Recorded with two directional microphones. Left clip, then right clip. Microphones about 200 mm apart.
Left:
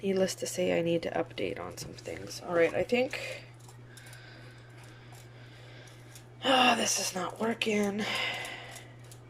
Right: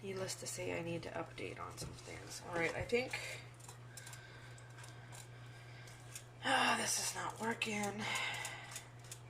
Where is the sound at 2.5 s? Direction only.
55° left (ahead or behind).